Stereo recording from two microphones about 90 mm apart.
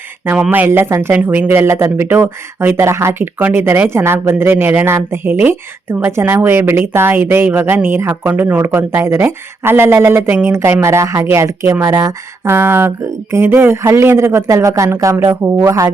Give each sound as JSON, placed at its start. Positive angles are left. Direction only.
{"t": 0.5, "sound": "speech", "side_deg": -25}